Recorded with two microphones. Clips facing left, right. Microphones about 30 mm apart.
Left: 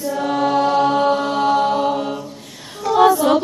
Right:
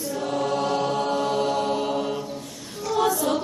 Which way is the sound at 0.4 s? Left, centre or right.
Left.